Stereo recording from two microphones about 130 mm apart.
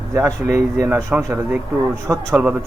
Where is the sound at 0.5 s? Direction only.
20° right (ahead or behind).